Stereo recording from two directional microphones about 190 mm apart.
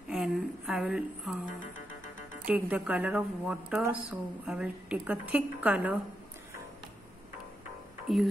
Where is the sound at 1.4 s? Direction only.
45° left (ahead or behind).